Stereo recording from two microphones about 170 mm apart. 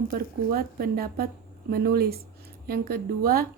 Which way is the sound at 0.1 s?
60° right (ahead or behind).